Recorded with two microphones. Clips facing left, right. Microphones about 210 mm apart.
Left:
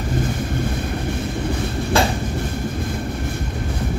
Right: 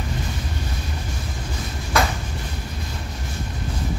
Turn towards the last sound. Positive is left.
turn(degrees=30)  # may be behind; listen again after turning